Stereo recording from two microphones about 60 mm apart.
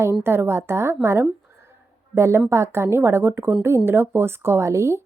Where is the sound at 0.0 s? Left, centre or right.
Right.